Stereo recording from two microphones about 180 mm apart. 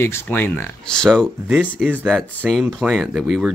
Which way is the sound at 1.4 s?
10° right (ahead or behind).